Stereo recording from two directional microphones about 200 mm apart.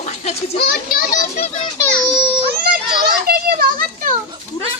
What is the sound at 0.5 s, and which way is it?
A child's voice, 50° left (ahead or behind).